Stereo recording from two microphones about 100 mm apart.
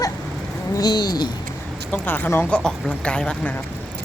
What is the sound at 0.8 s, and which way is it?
Speech, 45° left (ahead or behind).